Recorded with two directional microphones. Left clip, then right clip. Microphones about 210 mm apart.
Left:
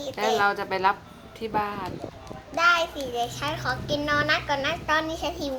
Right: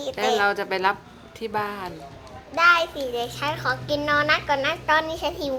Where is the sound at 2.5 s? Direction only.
35° right (ahead or behind).